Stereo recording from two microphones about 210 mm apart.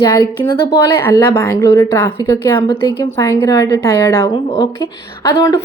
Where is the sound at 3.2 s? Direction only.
15° left (ahead or behind).